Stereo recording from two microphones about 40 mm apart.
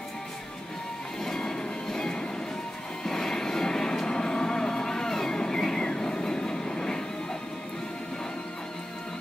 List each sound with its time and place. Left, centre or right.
1.2 s train: centre
3.0 s music: centre